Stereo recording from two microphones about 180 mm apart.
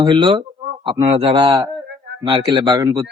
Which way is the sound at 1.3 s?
20° right (ahead or behind).